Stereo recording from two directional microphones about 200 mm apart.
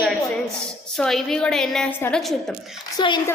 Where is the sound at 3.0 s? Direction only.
20° left (ahead or behind).